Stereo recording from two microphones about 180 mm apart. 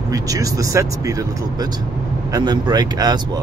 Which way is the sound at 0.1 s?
20° right (ahead or behind).